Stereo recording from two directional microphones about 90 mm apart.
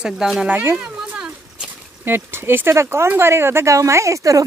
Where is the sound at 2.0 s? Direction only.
25° right (ahead or behind).